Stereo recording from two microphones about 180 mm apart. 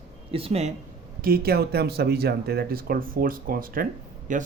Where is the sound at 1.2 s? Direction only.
55° right (ahead or behind).